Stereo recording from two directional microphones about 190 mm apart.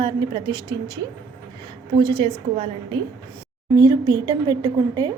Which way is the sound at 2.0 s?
25° right (ahead or behind).